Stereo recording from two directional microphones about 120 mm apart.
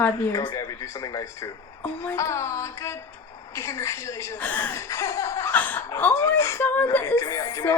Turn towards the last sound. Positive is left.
turn(degrees=25)  # may be behind; listen again after turning